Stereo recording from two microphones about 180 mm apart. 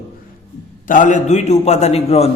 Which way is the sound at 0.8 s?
45° left (ahead or behind).